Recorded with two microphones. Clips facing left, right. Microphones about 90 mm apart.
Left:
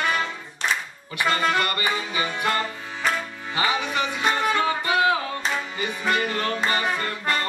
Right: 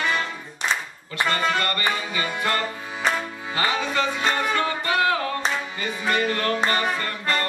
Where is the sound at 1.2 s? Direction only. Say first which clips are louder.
Left 1 dB; 15° left (ahead or behind).